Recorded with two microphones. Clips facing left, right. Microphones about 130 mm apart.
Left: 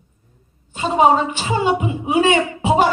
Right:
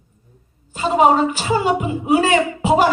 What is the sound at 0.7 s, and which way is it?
A woman's voice, 40° right (ahead or behind).